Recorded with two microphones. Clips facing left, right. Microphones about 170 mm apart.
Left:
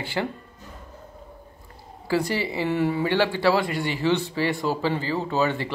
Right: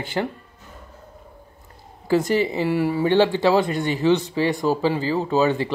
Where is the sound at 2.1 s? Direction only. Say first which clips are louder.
Right 5 dB; 20° right (ahead or behind).